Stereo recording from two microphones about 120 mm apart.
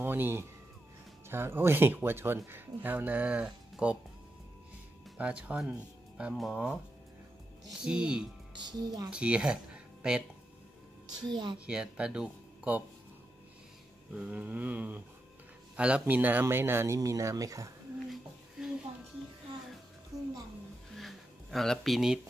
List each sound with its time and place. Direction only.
0.0 s speech: 15° right (ahead or behind)
5.1 s speech: 10° right (ahead or behind)
7.8 s speech: 5° right (ahead or behind)
8.5 s speech: 35° right (ahead or behind)
9.1 s speech: 10° right (ahead or behind)
11.2 s speech: 40° right (ahead or behind)
11.6 s speech: 5° right (ahead or behind)
14.1 s speech: 10° right (ahead or behind); by 17.6 s 30° right (ahead or behind)
20.1 s music: 5° right (ahead or behind)
20.9 s a sound: centre (ahead or behind)